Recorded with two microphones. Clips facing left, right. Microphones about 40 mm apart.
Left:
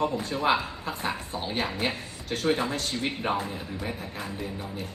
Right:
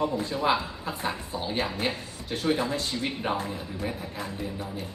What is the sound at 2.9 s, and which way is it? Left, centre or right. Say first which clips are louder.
Speech: left 1 dB; left.